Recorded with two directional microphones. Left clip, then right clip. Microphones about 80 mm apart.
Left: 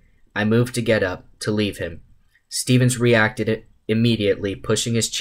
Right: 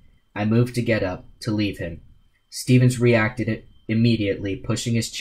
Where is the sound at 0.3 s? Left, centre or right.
Left.